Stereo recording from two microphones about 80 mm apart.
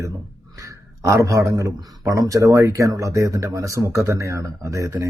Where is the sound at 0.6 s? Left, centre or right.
Right.